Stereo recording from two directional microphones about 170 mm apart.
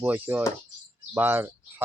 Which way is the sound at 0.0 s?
10° right (ahead or behind).